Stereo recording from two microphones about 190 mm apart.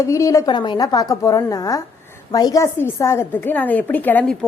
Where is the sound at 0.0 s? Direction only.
15° left (ahead or behind).